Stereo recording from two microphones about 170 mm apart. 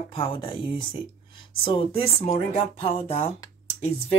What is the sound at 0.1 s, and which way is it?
Speech, 30° left (ahead or behind).